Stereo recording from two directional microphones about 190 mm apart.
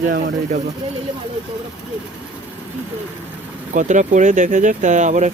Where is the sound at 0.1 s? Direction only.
45° right (ahead or behind).